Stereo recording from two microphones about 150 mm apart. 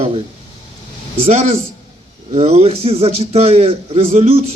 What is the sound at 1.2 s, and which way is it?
A man's voice, 45° right (ahead or behind).